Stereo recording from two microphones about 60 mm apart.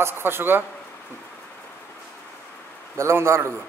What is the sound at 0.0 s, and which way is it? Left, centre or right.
Speech, right.